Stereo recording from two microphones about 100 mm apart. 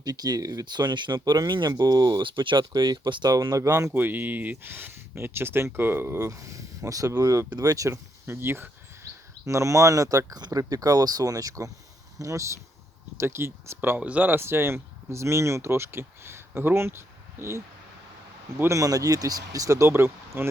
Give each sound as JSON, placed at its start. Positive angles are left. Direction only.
{"t": 0.0, "sound": "speech", "side_deg": -40}
{"t": 3.3, "sound": "speech", "side_deg": -35}
{"t": 3.9, "sound": "speech", "side_deg": -20}
{"t": 18.6, "sound": "speech", "side_deg": -35}